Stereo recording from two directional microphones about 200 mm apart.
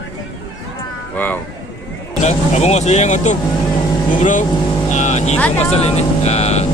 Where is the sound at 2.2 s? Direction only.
35° left (ahead or behind).